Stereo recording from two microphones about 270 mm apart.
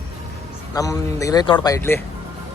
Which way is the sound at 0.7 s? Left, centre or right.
Centre.